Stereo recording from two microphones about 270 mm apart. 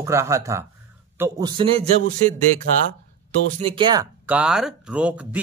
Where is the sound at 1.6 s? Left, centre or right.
Right.